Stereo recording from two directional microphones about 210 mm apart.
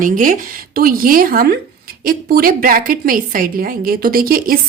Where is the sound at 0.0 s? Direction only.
40° right (ahead or behind).